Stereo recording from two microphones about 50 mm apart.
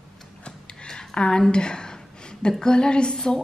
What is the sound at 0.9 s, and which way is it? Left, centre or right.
A woman's voice, centre.